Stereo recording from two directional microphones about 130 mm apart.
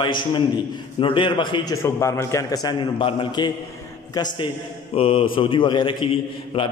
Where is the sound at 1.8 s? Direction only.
20° left (ahead or behind).